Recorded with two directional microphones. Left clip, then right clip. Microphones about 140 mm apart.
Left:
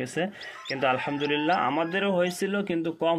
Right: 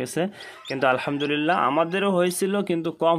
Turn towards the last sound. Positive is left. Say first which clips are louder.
# right 4 dB
turn(degrees=-50)  # may be behind; listen again after turning